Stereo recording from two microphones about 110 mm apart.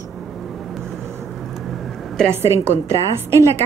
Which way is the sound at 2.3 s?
25° right (ahead or behind).